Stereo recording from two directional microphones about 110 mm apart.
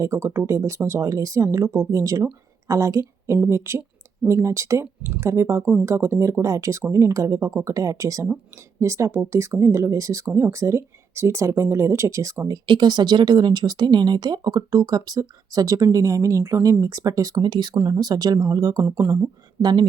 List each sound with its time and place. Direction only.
0.0 s speech: 25° right (ahead or behind)
12.6 s speech: 45° right (ahead or behind)
17.4 s speech: 45° right (ahead or behind); by 19.3 s 25° right (ahead or behind)
19.6 s speech: 45° right (ahead or behind)